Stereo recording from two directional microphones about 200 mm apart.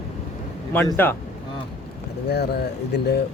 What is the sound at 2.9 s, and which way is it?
Speech, 55° left (ahead or behind).